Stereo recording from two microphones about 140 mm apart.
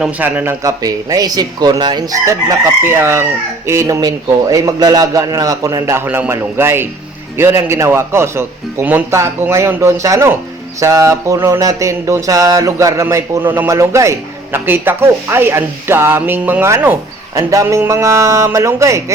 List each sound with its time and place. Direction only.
0.0 s speech: 10° right (ahead or behind)
0.6 s mantra: 25° right (ahead or behind)